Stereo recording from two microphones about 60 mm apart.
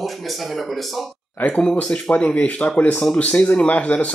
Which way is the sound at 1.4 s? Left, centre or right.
Centre.